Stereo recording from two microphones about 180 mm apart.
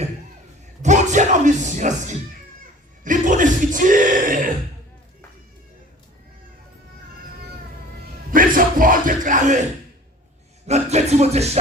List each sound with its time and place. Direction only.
0.8 s speech: 40° right (ahead or behind)
8.3 s music: 50° right (ahead or behind)
10.7 s music: 40° right (ahead or behind)